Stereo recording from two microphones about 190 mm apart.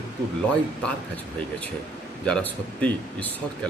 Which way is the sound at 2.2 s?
5° left (ahead or behind).